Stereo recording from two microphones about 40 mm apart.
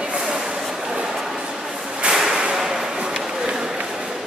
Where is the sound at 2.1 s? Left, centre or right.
Centre.